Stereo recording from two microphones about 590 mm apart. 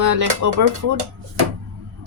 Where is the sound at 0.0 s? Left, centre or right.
Right.